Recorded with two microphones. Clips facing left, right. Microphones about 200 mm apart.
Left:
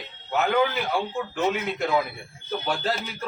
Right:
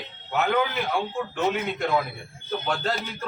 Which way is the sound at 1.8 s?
Centre (ahead or behind).